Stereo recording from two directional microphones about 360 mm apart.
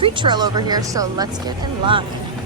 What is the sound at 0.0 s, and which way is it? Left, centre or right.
Speech, centre.